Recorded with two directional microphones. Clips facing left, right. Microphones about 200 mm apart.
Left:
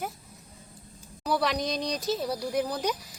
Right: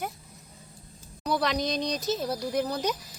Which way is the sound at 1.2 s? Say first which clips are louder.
Even; 5° left (ahead or behind).